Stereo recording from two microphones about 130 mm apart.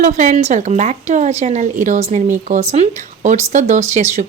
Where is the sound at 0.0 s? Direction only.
70° right (ahead or behind).